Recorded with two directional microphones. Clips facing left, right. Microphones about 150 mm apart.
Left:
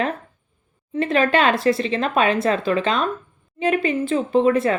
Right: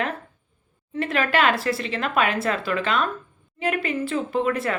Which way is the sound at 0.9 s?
25° left (ahead or behind).